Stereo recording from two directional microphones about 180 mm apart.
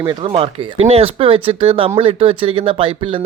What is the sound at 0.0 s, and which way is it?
Speech, 25° right (ahead or behind).